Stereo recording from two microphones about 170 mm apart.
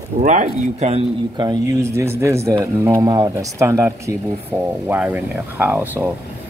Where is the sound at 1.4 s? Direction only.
20° right (ahead or behind).